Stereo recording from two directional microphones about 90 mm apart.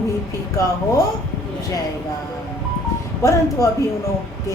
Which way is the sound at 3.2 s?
35° left (ahead or behind).